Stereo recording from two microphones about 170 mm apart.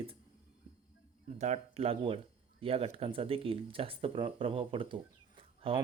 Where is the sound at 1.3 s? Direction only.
40° right (ahead or behind).